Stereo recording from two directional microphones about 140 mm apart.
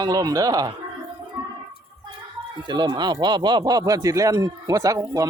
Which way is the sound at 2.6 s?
30° right (ahead or behind).